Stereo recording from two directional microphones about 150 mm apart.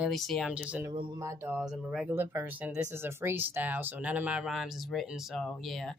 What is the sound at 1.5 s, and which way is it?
Speech, 5° right (ahead or behind).